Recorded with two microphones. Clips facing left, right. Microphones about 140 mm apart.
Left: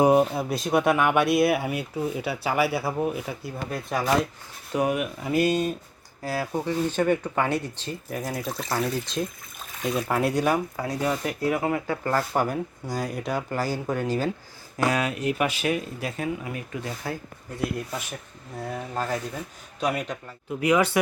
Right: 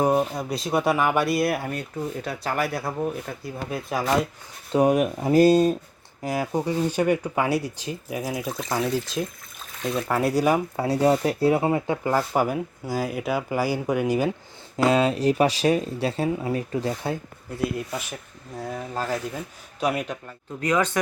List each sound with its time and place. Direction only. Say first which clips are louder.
0.0 s speech: left 3 dB; 10° left (ahead or behind)
4.7 s speech: right 5 dB; 35° right (ahead or behind)
6.2 s speech: right 2 dB; 15° right (ahead or behind)
10.8 s speech: right 6 dB; 30° right (ahead or behind)
12.0 s speech: right 1 dB; 10° right (ahead or behind)
14.8 s speech: right 5 dB; 25° right (ahead or behind)
17.7 s speech: right 2 dB; 5° right (ahead or behind)
20.6 s speech: left 2 dB; 10° left (ahead or behind)